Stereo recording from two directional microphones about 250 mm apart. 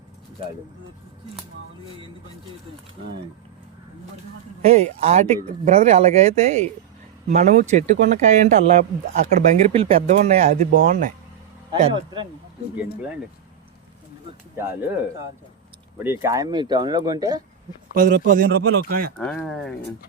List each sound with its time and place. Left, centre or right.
4.6 s speech: right
12.7 s speech: centre
14.5 s speech: centre
16.0 s speech: centre
17.9 s speech: right
19.2 s speech: centre